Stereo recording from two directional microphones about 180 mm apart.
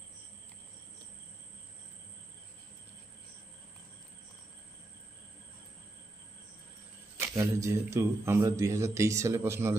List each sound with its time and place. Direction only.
7.2 s speech: 15° right (ahead or behind)